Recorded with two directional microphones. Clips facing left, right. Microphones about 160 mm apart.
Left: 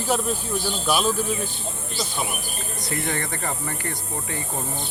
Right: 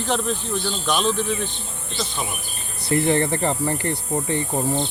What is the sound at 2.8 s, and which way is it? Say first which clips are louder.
Speech: right 10 dB; 30° right (ahead or behind).